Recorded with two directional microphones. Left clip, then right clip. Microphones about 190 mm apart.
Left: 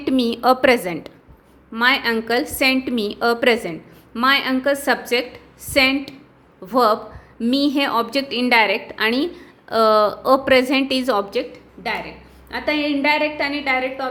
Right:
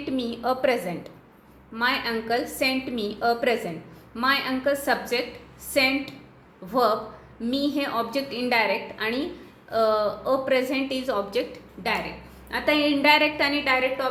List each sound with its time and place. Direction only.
0.0 s a woman's voice: 45° left (ahead or behind)
11.3 s a woman's voice: 25° left (ahead or behind)
12.5 s a woman's voice: 10° left (ahead or behind)